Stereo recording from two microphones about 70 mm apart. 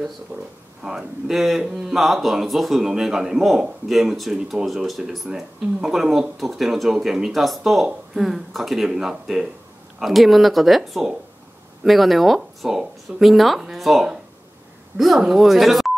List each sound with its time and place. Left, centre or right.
0.3 s speech: right
0.8 s speech: centre